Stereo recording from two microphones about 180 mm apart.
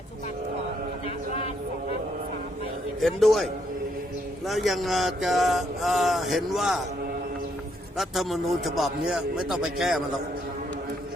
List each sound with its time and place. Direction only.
1.0 s a sound: 35° left (ahead or behind)
3.0 s speech: centre (ahead or behind)
7.9 s speech: centre (ahead or behind)